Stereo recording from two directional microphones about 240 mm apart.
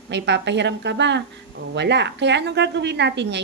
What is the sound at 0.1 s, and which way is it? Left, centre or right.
A woman's voice, right.